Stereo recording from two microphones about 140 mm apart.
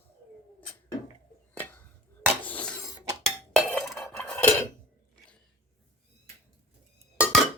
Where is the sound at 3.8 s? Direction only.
Centre (ahead or behind).